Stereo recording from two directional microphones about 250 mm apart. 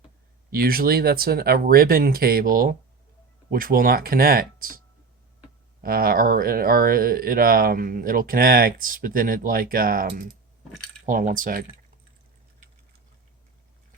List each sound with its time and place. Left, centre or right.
0.5 s speech: right
5.8 s speech: right